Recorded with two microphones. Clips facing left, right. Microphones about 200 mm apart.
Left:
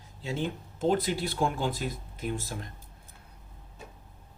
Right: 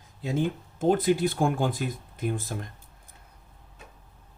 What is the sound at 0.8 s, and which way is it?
Speech, 50° right (ahead or behind).